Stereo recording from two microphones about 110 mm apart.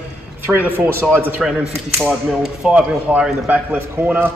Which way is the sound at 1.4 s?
5° right (ahead or behind).